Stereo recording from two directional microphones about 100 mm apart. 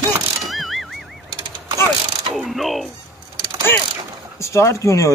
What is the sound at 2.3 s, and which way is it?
Mechanisms, centre (ahead or behind).